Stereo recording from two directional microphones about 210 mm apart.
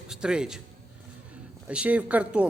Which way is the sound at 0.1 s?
5° right (ahead or behind).